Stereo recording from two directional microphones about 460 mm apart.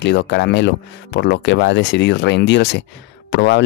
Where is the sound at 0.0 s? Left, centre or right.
Left.